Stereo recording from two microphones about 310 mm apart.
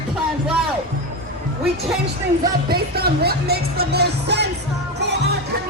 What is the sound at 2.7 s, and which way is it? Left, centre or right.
Music, right.